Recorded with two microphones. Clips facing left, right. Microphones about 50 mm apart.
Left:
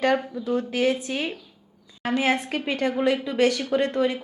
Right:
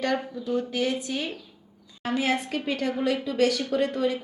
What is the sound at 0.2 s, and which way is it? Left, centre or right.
Speech, centre.